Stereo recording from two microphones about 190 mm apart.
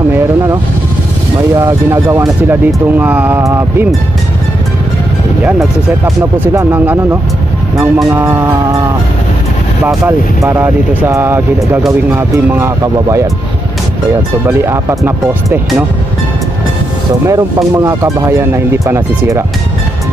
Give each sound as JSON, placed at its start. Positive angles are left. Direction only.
{"t": 1.6, "sound": "speech", "side_deg": -15}
{"t": 6.5, "sound": "speech", "side_deg": -15}
{"t": 7.7, "sound": "speech", "side_deg": 0}
{"t": 8.1, "sound": "speech", "side_deg": -10}
{"t": 10.0, "sound": "speech", "side_deg": -10}
{"t": 14.4, "sound": "speech", "side_deg": -15}
{"t": 17.3, "sound": "speech", "side_deg": -15}